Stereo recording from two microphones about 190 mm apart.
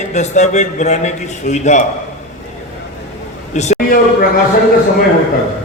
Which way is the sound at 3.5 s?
40° left (ahead or behind).